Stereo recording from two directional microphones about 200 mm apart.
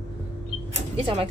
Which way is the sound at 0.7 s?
30° right (ahead or behind).